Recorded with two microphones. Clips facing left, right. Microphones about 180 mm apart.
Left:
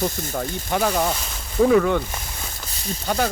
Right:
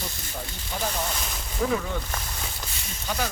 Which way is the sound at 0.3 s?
70° left (ahead or behind).